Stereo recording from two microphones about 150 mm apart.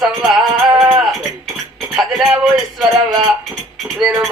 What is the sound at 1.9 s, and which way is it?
Speech, centre (ahead or behind).